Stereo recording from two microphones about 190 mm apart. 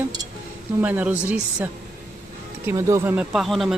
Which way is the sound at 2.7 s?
15° right (ahead or behind).